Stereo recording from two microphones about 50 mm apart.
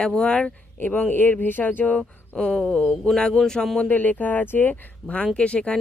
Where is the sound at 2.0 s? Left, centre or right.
Centre.